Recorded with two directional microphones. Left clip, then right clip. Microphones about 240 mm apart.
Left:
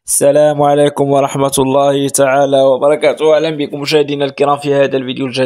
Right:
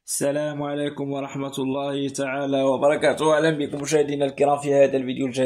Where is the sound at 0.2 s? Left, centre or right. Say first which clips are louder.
Left 16 dB; left.